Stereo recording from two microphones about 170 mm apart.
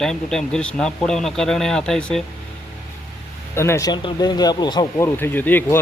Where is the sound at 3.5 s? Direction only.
15° left (ahead or behind).